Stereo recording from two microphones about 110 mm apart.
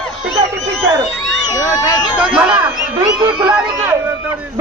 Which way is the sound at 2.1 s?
10° right (ahead or behind).